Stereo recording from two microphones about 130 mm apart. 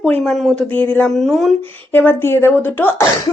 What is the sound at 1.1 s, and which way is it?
Speech, centre (ahead or behind).